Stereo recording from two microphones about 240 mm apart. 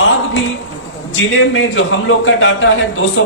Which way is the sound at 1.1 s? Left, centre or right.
Left.